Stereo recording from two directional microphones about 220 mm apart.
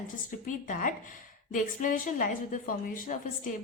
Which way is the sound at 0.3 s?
35° left (ahead or behind).